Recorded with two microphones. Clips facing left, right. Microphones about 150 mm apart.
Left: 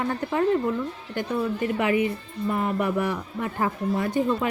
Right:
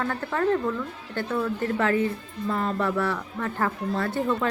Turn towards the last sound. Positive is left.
turn(degrees=15)  # may be behind; listen again after turning